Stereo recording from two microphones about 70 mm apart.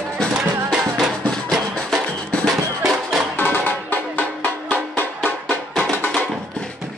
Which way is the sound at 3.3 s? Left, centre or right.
Left.